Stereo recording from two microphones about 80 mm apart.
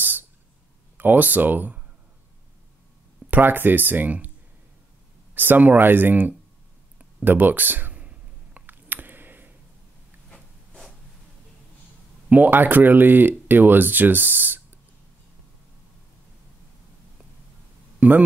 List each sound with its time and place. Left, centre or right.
0.0 s owl: right
0.9 s speech: right
3.3 s speech: right
5.3 s speech: right
7.0 s a sound: centre
10.3 s zipper: centre
12.3 s speech: right
18.0 s speech: centre